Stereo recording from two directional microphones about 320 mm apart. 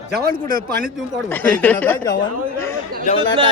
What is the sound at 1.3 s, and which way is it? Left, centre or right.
Speech, centre.